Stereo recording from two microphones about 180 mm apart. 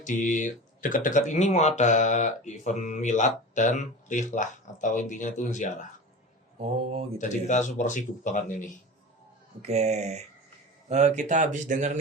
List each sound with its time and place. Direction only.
0.0 s speech: 45° left (ahead or behind)
6.6 s speech: 35° right (ahead or behind)
7.2 s speech: 45° left (ahead or behind)
9.6 s speech: 35° right (ahead or behind)